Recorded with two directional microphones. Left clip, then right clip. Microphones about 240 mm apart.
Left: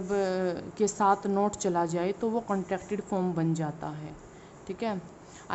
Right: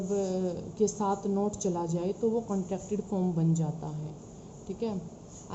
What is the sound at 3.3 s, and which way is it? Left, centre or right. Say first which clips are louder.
A woman's voice: left 2 dB; centre.